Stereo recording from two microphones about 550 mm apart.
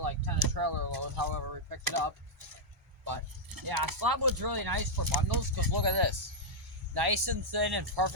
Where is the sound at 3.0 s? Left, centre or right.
Right.